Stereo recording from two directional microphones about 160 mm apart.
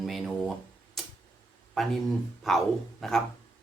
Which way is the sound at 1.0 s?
Centre (ahead or behind).